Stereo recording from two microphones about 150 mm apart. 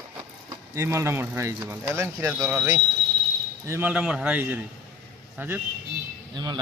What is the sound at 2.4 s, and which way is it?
Speech, centre (ahead or behind).